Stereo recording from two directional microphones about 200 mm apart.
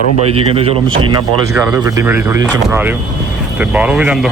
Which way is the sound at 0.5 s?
30° right (ahead or behind).